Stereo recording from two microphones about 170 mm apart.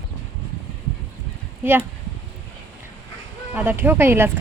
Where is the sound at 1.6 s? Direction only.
10° right (ahead or behind).